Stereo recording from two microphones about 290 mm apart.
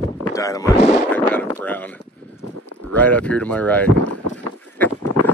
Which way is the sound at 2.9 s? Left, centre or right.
Centre.